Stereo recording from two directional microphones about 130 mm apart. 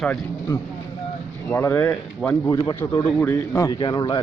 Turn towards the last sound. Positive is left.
turn(degrees=35)  # may be behind; listen again after turning